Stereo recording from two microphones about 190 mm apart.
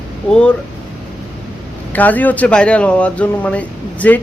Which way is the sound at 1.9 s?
10° left (ahead or behind).